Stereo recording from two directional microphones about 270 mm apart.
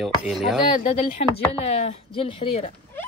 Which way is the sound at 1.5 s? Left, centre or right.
Left.